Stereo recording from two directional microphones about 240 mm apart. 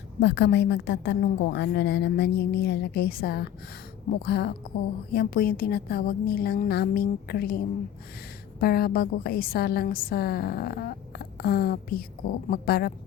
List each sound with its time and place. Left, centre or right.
0.2 s a woman's voice: left
8.6 s a woman's voice: left